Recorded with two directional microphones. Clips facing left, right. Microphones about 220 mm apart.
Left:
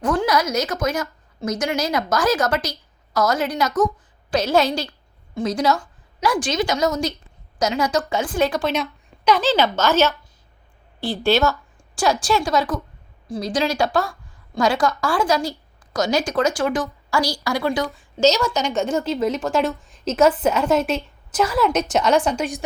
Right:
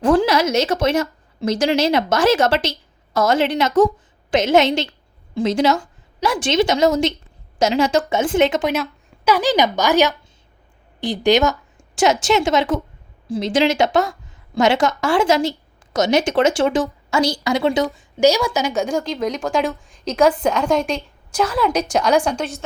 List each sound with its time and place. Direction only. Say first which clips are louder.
0.0 s a woman's voice: right 5 dB; 30° right (ahead or behind)
8.7 s a woman's voice: right 2 dB; 5° right (ahead or behind)